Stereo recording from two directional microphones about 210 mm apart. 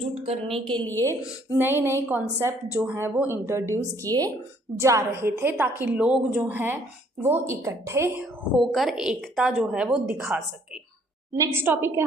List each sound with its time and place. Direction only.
0.0 s a woman's voice: 30° right (ahead or behind)
0.9 s a woman's voice: 10° left (ahead or behind)
1.5 s a woman's voice: 10° right (ahead or behind)